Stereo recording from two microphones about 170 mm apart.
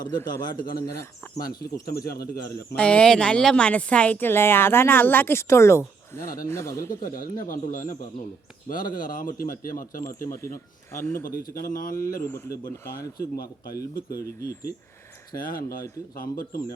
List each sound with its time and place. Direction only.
0.5 s speech: 60° left (ahead or behind)
1.5 s speech: 20° left (ahead or behind)
2.0 s speech: 65° left (ahead or behind)
2.7 s speech: 5° left (ahead or behind)
7.0 s speech: 55° left (ahead or behind)
10.2 s speech: 15° left (ahead or behind)
11.6 s speech: 55° left (ahead or behind)
12.8 s speech: 15° left (ahead or behind)
13.1 s speech: 65° left (ahead or behind)
13.7 s speech: 20° left (ahead or behind)
15.4 s speech: 55° left (ahead or behind)